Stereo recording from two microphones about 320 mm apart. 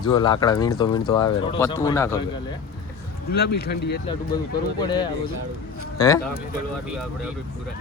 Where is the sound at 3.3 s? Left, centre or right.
Left.